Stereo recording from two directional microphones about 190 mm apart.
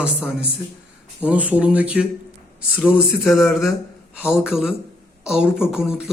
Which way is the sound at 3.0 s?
5° left (ahead or behind).